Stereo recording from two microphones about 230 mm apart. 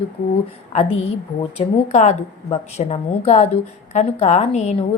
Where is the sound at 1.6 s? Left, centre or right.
Left.